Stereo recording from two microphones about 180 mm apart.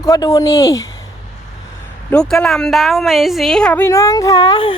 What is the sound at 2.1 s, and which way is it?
A woman's voice, 5° left (ahead or behind).